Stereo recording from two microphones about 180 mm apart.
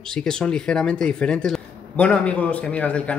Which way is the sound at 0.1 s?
5° left (ahead or behind).